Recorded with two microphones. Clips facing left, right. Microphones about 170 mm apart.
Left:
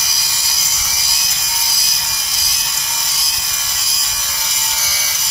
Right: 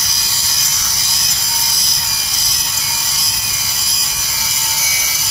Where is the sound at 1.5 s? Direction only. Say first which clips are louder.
Even; 5° left (ahead or behind).